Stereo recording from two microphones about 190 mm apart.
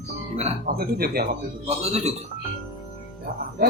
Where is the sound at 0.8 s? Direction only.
55° right (ahead or behind).